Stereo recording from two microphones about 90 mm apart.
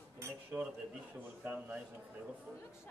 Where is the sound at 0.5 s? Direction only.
10° right (ahead or behind).